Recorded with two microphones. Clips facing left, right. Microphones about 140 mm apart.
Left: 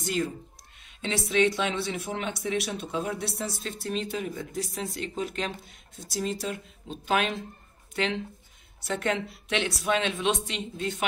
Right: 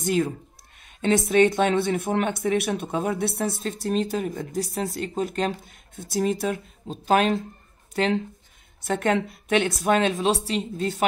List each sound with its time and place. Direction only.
0.0 s speech: 50° right (ahead or behind)
6.9 s speech: 40° right (ahead or behind)